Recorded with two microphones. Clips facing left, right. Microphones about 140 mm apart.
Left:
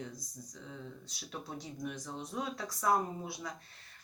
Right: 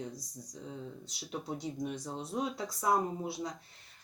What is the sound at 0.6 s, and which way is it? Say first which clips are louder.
Speech: right 4 dB; 25° right (ahead or behind).